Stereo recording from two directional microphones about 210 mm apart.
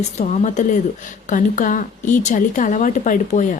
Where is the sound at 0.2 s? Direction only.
35° left (ahead or behind).